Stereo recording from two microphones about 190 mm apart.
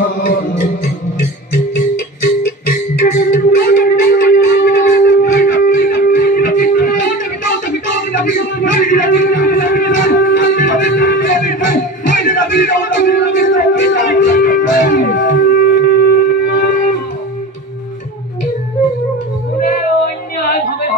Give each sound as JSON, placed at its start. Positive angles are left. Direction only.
{"t": 0.0, "sound": "music", "side_deg": 50}
{"t": 3.0, "sound": "music", "side_deg": 50}
{"t": 16.4, "sound": "guitar", "side_deg": 55}